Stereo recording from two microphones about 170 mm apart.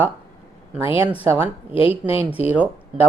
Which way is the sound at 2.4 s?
35° left (ahead or behind).